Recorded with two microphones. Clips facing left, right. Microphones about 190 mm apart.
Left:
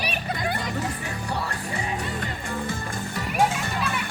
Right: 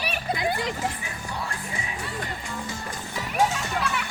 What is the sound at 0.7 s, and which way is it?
Music, 65° left (ahead or behind).